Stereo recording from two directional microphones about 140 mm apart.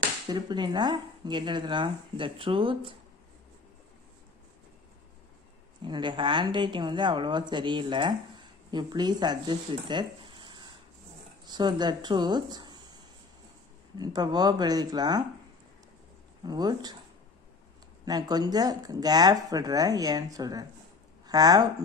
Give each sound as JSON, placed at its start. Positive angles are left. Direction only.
{"t": 0.3, "sound": "speech", "side_deg": -30}
{"t": 5.9, "sound": "speech", "side_deg": -35}
{"t": 13.9, "sound": "speech", "side_deg": -30}
{"t": 16.4, "sound": "speech", "side_deg": -30}
{"t": 18.0, "sound": "speech", "side_deg": -30}